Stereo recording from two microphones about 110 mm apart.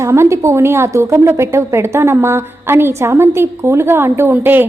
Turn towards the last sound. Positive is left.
turn(degrees=-15)  # may be behind; listen again after turning